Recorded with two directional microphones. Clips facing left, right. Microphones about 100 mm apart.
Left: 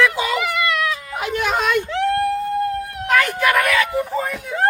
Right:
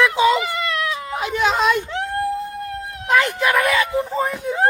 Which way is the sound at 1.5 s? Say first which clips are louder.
Right 2 dB; 55° left (ahead or behind).